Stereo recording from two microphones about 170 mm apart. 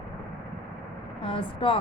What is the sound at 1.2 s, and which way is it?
Speech, 30° left (ahead or behind).